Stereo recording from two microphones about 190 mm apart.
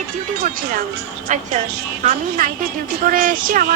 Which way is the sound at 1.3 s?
35° right (ahead or behind).